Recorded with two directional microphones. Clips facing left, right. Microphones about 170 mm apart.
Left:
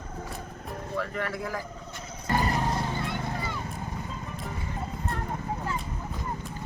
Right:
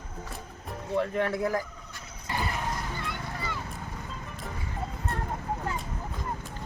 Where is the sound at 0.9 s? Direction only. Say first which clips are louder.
Right 5 dB; 25° right (ahead or behind).